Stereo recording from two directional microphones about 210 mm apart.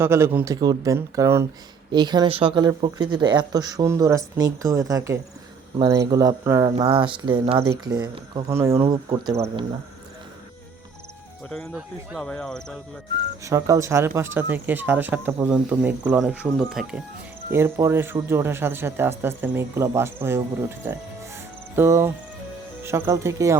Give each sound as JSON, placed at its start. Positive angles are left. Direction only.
{"t": 0.0, "sound": "speech", "side_deg": -10}
{"t": 6.7, "sound": "speech", "side_deg": -25}
{"t": 11.5, "sound": "speech", "side_deg": 0}
{"t": 13.4, "sound": "speech", "side_deg": -15}